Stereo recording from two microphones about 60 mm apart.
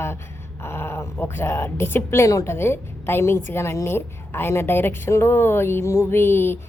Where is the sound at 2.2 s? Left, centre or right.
Left.